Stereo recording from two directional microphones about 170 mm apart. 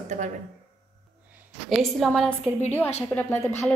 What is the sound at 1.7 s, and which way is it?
A woman's voice, centre (ahead or behind).